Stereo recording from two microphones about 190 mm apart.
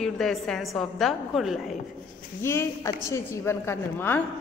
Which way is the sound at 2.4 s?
15° left (ahead or behind).